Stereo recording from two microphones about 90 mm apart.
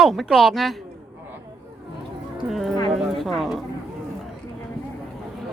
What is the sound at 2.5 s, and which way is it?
Speech, centre (ahead or behind).